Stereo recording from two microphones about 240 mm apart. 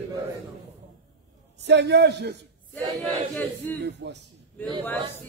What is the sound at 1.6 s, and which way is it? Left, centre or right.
Speech, right.